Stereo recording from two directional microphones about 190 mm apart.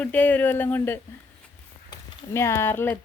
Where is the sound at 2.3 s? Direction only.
15° left (ahead or behind).